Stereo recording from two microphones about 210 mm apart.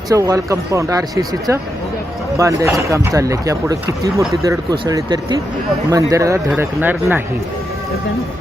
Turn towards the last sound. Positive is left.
turn(degrees=-10)  # may be behind; listen again after turning